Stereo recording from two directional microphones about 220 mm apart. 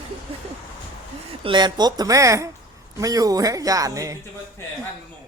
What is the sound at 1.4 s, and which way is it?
Speech, 20° right (ahead or behind).